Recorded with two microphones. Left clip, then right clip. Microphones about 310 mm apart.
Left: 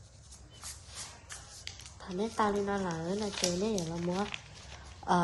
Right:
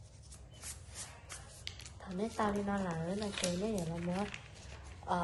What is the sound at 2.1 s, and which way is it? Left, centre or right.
A woman's voice, left.